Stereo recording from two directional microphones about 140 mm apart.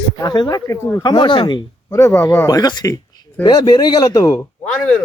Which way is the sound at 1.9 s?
20° left (ahead or behind).